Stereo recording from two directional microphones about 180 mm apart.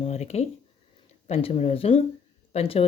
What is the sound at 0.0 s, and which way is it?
Speech, 35° left (ahead or behind).